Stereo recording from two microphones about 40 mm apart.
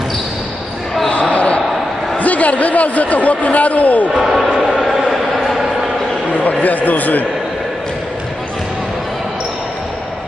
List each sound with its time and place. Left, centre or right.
1.0 s basketball bounce: left
1.3 s a sound: left
2.1 s a man's voice: left
4.1 s basketball bounce: centre
4.8 s a sound: centre
6.6 s a man's voice: left